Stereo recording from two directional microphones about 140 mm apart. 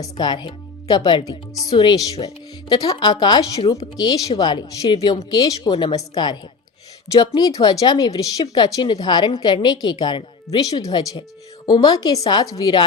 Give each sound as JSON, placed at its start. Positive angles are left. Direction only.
{"t": 0.0, "sound": "speech", "side_deg": 30}